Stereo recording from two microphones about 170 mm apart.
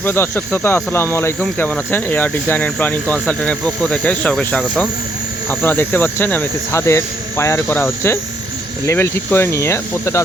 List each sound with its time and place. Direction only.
0.0 s speech: 15° left (ahead or behind)